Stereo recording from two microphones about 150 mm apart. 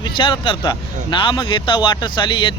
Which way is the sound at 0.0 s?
35° left (ahead or behind).